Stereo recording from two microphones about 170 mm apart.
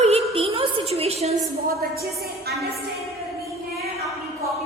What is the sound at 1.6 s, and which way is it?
Speech, 65° right (ahead or behind).